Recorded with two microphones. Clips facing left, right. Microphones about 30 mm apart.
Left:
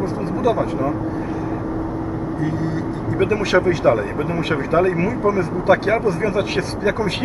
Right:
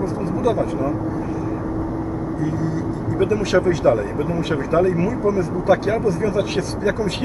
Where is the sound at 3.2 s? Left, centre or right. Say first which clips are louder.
Left 1 dB; left.